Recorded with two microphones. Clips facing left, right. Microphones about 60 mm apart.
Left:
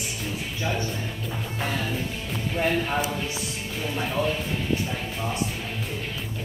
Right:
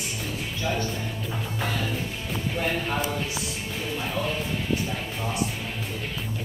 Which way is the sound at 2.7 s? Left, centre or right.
Centre.